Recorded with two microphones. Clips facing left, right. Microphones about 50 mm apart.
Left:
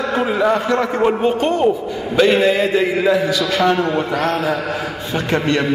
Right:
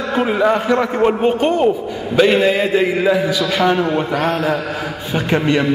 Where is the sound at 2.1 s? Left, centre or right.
Centre.